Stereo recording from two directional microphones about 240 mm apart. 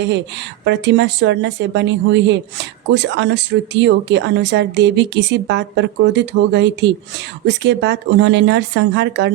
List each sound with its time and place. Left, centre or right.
0.6 s speech: right